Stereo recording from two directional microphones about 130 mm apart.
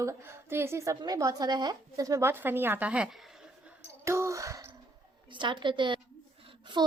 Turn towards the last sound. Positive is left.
turn(degrees=-35)  # may be behind; listen again after turning